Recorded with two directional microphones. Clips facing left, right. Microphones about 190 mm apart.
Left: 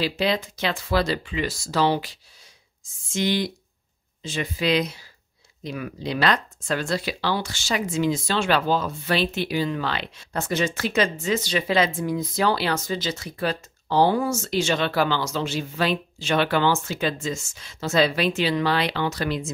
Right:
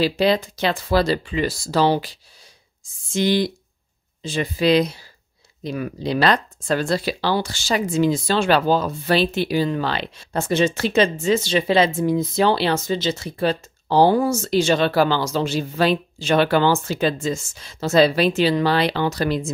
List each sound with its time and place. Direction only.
0.2 s speech: 35° right (ahead or behind)